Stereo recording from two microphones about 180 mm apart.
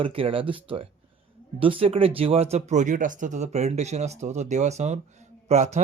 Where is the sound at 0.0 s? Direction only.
30° right (ahead or behind).